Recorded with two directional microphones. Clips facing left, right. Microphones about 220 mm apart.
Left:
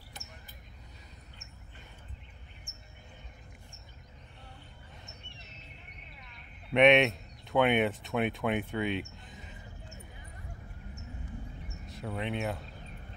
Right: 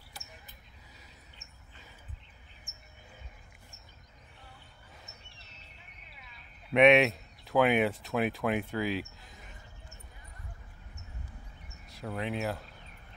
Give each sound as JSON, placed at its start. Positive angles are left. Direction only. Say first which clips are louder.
{"t": 5.4, "sound": "a sound", "louder": "left 5 dB", "side_deg": -35}
{"t": 6.1, "sound": "speech", "louder": "left 2 dB", "side_deg": -5}
{"t": 11.9, "sound": "speech", "louder": "even", "side_deg": 0}